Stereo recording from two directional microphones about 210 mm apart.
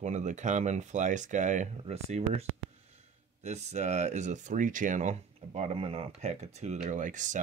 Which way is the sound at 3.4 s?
35° right (ahead or behind).